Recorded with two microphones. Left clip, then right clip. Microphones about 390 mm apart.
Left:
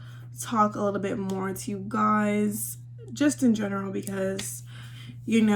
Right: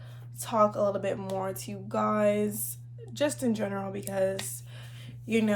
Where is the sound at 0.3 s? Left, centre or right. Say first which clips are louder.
Left 1 dB; centre.